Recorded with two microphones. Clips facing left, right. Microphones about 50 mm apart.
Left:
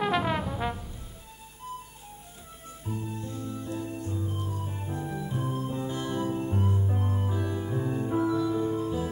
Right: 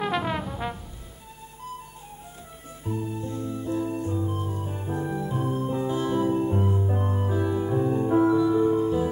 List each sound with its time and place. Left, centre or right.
0.0 s brass instrument: centre
2.8 s organ: centre
4.1 s music: centre